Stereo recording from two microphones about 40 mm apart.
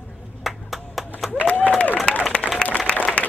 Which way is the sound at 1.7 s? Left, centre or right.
Left.